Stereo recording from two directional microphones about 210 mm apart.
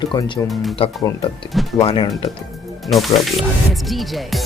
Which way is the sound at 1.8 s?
20° left (ahead or behind).